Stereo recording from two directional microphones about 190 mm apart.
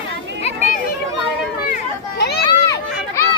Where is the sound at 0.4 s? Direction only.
40° left (ahead or behind).